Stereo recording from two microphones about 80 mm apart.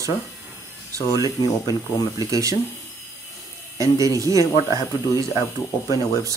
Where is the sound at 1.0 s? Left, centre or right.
Left.